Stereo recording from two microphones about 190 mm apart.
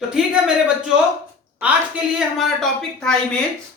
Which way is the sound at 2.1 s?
Centre (ahead or behind).